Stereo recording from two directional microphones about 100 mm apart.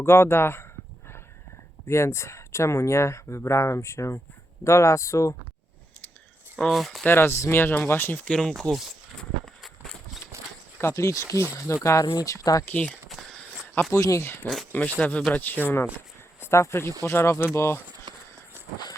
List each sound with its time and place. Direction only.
0.0 s speech: 25° left (ahead or behind)
1.9 s speech: 25° left (ahead or behind)
6.7 s speech: centre (ahead or behind)
7.0 s speech: 25° left (ahead or behind)
8.3 s speech: 5° left (ahead or behind)
10.3 s a sound: 30° right (ahead or behind)
10.8 s speech: 30° left (ahead or behind)
12.6 s speech: 15° left (ahead or behind)
13.1 s a sound: centre (ahead or behind)
13.9 s speech: 30° left (ahead or behind)
18.1 s run: 50° right (ahead or behind)